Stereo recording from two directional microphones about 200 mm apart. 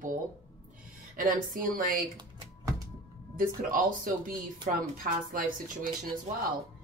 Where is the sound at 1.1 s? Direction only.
45° right (ahead or behind).